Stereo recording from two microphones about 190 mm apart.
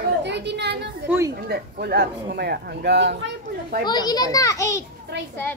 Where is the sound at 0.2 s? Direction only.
65° right (ahead or behind).